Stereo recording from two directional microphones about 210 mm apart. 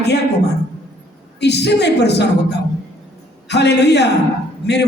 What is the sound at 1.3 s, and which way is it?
A woman's voice, 55° left (ahead or behind).